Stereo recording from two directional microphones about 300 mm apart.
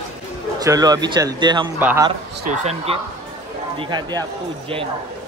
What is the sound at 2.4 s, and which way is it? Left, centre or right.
Speech, right.